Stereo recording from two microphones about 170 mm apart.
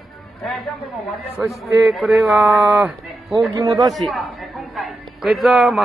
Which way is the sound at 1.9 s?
Centre (ahead or behind).